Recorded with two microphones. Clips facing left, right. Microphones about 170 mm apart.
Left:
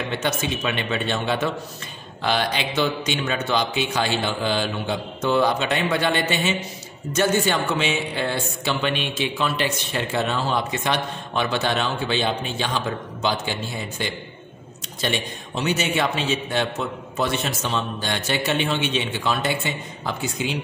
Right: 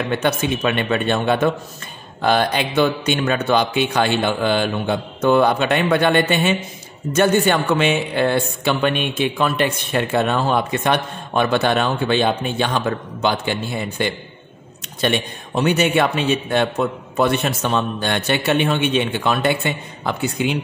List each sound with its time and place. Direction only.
0.1 s speech: 55° right (ahead or behind)